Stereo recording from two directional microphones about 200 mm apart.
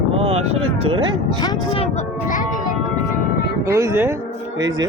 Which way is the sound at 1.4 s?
25° left (ahead or behind).